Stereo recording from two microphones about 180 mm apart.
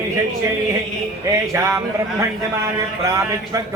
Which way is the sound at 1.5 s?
15° right (ahead or behind).